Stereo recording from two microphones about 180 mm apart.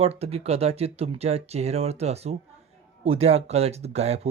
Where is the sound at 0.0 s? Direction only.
35° right (ahead or behind).